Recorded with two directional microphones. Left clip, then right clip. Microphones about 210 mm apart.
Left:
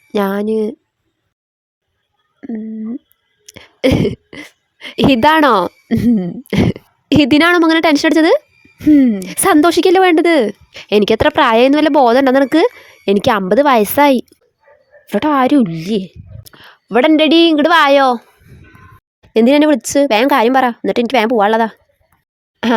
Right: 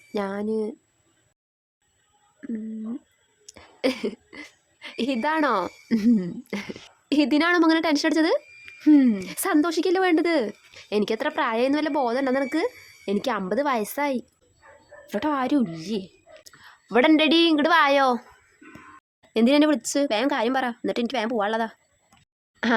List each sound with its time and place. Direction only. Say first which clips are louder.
0.1 s speech: left 11 dB; 40° left (ahead or behind)
3.4 s a sound: left 11 dB; 35° left (ahead or behind)
5.9 s throat clearing: left 4 dB; 25° left (ahead or behind)
6.5 s a woman's voice: left 17 dB; 40° left (ahead or behind)
8.8 s throat clearing: left 8 dB; 30° left (ahead or behind)
9.2 s a child's voice: left 13 dB; 40° left (ahead or behind)
19.3 s speech: left 10 dB; 35° left (ahead or behind)